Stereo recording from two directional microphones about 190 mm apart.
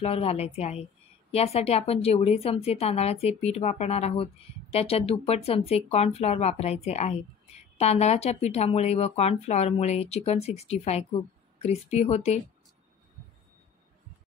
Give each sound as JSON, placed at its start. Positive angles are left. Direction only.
{"t": 0.0, "sound": "speech", "side_deg": 30}